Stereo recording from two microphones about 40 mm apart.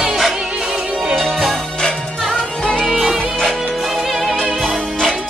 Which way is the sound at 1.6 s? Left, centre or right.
Centre.